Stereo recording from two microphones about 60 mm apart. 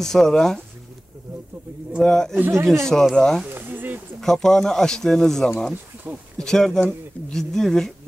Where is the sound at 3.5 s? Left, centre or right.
Right.